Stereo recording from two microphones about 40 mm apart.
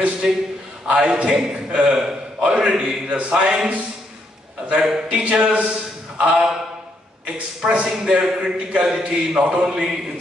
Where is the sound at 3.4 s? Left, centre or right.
Right.